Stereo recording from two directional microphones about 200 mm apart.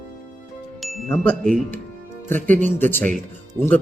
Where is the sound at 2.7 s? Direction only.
10° left (ahead or behind).